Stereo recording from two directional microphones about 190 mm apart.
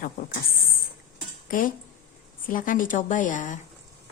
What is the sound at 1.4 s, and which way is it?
Speech, 45° left (ahead or behind).